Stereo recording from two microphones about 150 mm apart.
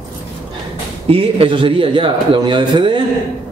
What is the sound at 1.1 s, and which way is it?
A man's voice, 35° right (ahead or behind).